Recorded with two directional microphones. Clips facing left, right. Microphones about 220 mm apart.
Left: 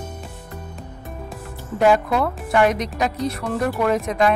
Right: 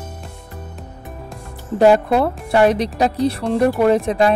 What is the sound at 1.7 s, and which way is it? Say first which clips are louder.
Speech: right 4 dB; 35° right (ahead or behind).